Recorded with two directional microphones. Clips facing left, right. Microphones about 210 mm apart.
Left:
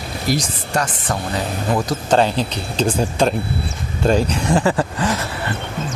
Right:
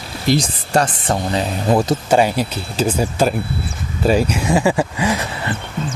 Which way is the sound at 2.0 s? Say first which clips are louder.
Right 1 dB; 10° right (ahead or behind).